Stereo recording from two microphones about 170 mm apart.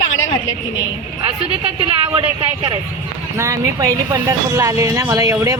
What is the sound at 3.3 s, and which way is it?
Speech, 20° right (ahead or behind).